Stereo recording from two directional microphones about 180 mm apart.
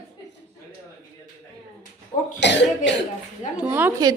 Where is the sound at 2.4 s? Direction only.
75° left (ahead or behind).